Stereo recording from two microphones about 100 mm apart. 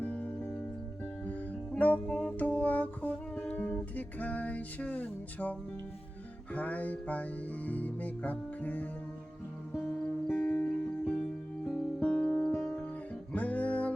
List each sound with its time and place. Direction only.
0.0 s music: 15° left (ahead or behind)
11.7 s music: 10° left (ahead or behind)